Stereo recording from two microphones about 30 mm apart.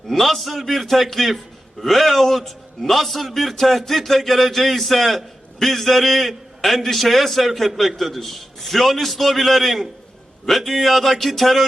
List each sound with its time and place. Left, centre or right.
0.1 s a man's voice: centre